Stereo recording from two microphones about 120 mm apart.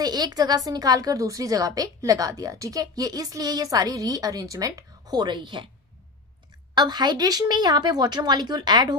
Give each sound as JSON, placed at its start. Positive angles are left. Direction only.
{"t": 0.0, "sound": "a woman's voice", "side_deg": -35}
{"t": 6.7, "sound": "a woman's voice", "side_deg": -35}